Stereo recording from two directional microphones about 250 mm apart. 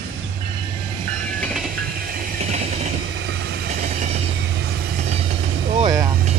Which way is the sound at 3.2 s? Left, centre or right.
Right.